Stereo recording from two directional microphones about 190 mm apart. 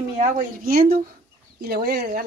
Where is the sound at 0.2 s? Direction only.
50° right (ahead or behind).